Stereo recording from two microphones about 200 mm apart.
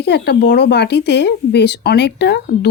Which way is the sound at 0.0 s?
55° left (ahead or behind).